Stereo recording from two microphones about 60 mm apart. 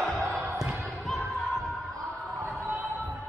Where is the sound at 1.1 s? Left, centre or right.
Centre.